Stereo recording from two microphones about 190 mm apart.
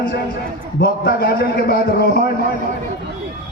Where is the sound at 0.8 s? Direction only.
50° left (ahead or behind).